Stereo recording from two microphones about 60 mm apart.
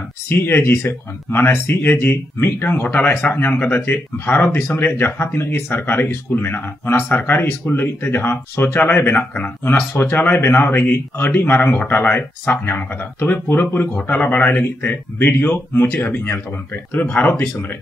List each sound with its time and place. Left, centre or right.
0.3 s speech: left
9.7 s speech: left